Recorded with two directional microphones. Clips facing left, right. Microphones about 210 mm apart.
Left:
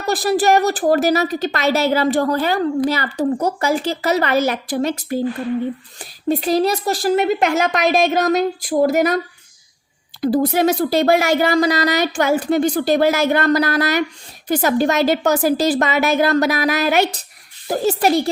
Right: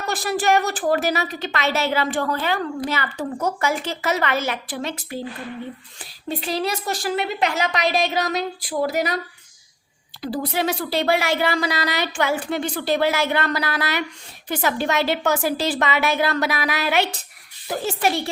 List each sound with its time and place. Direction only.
0.0 s a woman's voice: 35° left (ahead or behind)
10.2 s a woman's voice: 45° left (ahead or behind)